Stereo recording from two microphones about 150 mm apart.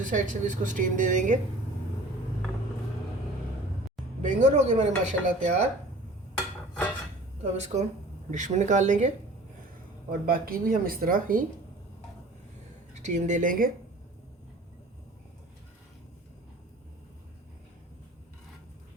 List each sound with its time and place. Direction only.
0.0 s speech: 60° right (ahead or behind)
4.2 s speech: 50° right (ahead or behind)
7.5 s speech: 50° right (ahead or behind)
10.1 s speech: 75° right (ahead or behind)
12.9 s speech: 55° right (ahead or behind)